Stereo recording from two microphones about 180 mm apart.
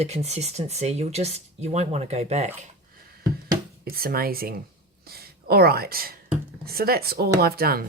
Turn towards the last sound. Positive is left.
turn(degrees=-55)  # may be behind; listen again after turning